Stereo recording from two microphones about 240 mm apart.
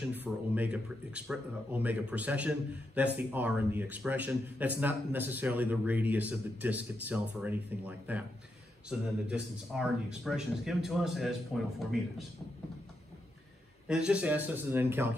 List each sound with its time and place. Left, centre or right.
0.1 s speech: centre
13.8 s speech: centre